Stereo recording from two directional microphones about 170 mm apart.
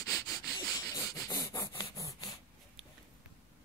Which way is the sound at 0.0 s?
20° left (ahead or behind).